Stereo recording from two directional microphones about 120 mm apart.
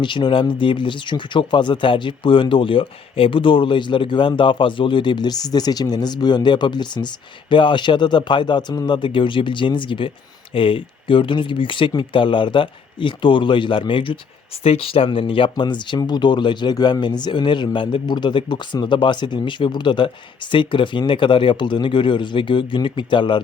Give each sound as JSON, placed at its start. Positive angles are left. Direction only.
{"t": 0.0, "sound": "speech", "side_deg": 40}
{"t": 14.6, "sound": "speech", "side_deg": 55}